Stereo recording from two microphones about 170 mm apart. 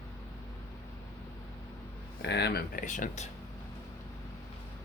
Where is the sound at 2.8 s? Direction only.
50° left (ahead or behind).